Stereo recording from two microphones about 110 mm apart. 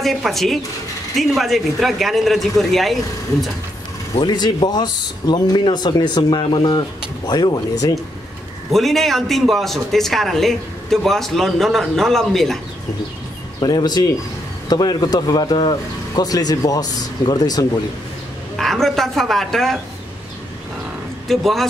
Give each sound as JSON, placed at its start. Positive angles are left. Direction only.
{"t": 0.0, "sound": "a man's voice", "side_deg": 0}
{"t": 4.2, "sound": "speech", "side_deg": 40}
{"t": 8.7, "sound": "a man's voice", "side_deg": 0}
{"t": 13.6, "sound": "speech", "side_deg": 40}
{"t": 18.6, "sound": "a man's voice", "side_deg": 0}
{"t": 21.3, "sound": "a man's voice", "side_deg": 0}